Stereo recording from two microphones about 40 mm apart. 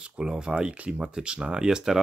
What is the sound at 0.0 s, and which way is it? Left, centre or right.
Speech, right.